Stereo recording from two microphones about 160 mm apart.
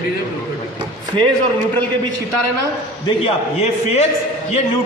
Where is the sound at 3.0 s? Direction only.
40° left (ahead or behind).